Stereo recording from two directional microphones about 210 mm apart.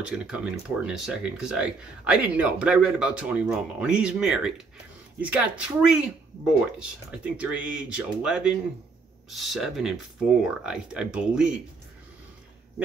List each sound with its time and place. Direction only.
0.0 s speech: 5° right (ahead or behind)